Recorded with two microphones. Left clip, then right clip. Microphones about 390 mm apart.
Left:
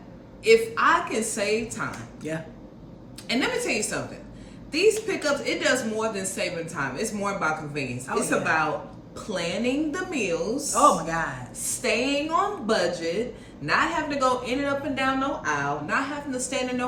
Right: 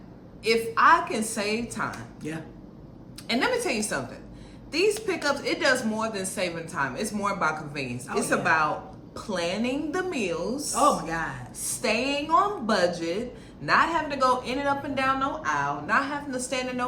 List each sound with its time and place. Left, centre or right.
0.4 s a woman's voice: centre
3.2 s a woman's voice: centre
10.8 s speech: centre
11.8 s a woman's voice: centre